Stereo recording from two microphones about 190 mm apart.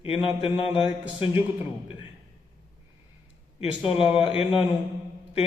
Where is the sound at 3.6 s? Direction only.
30° left (ahead or behind).